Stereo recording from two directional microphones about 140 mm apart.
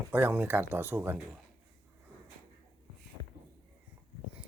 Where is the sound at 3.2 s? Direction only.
30° left (ahead or behind).